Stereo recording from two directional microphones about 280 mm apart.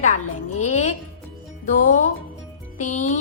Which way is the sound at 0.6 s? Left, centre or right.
Left.